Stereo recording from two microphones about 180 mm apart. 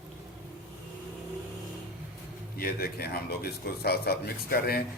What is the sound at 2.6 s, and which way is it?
Speech, 60° left (ahead or behind).